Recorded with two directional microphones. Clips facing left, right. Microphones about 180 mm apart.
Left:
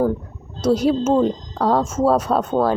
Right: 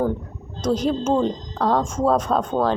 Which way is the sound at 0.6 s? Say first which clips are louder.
Left 4 dB; 10° left (ahead or behind).